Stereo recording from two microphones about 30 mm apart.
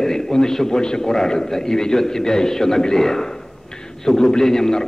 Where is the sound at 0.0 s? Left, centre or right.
Centre.